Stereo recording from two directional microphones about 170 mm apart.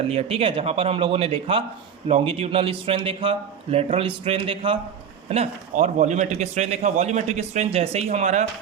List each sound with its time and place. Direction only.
0.1 s a man's voice: 35° right (ahead or behind)